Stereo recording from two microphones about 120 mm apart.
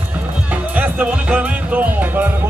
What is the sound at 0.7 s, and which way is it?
Music, 15° right (ahead or behind).